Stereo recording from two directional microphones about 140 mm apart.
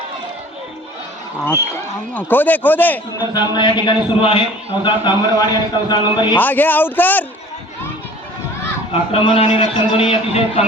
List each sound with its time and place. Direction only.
2.1 s a man's voice: 10° left (ahead or behind)
3.2 s a man's voice: 30° left (ahead or behind)
6.4 s a man's voice: 15° left (ahead or behind)
8.9 s a man's voice: 40° left (ahead or behind)